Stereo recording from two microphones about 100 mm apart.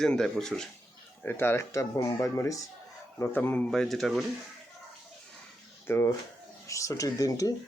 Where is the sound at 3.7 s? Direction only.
5° left (ahead or behind).